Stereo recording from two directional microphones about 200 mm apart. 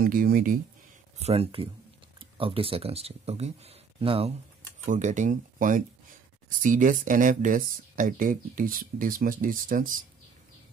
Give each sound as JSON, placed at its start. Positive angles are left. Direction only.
{"t": 0.0, "sound": "speech", "side_deg": -45}
{"t": 1.1, "sound": "speech", "side_deg": -30}